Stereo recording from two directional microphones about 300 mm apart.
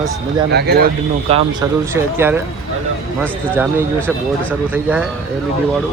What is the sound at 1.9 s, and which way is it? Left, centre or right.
Speech, centre.